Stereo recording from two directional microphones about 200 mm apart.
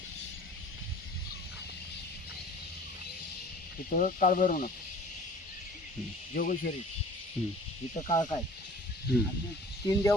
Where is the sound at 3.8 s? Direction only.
45° left (ahead or behind).